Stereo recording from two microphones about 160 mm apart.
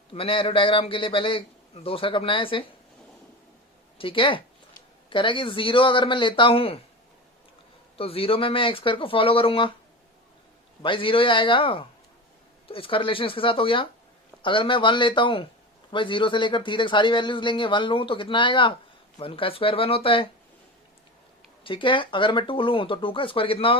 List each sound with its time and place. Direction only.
0.1 s speech: 35° left (ahead or behind)
3.9 s speech: 35° left (ahead or behind)
7.9 s speech: 35° left (ahead or behind)
10.8 s speech: 30° left (ahead or behind)
21.6 s speech: 30° left (ahead or behind)